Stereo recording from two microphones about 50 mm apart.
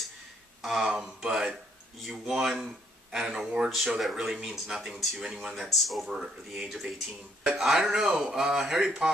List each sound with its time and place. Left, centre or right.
0.6 s speech: centre
4.0 s speech: centre
8.8 s speech: right